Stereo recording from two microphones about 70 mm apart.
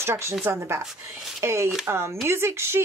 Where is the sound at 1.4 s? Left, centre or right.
Right.